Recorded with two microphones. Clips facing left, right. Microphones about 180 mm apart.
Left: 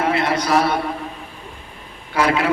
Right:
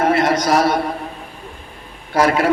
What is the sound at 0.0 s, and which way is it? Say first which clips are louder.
Speech: right 4 dB; 45° right (ahead or behind).